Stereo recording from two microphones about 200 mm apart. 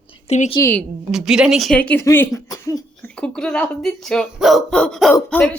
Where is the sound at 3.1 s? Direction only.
5° left (ahead or behind).